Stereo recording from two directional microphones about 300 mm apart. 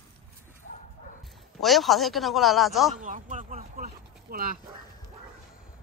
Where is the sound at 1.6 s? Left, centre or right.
Centre.